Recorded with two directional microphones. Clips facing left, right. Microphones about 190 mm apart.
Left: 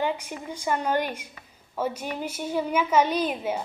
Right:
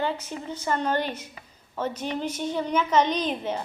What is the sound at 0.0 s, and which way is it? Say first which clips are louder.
A woman's voice: left 1 dB; 15° left (ahead or behind).